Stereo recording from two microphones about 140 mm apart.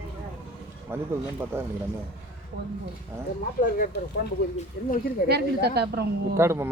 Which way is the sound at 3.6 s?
85° left.